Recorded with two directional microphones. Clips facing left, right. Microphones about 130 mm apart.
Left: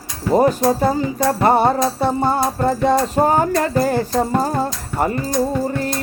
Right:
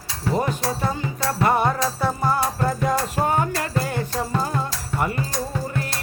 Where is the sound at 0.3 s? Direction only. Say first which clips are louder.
Left 11 dB; 40° left (ahead or behind).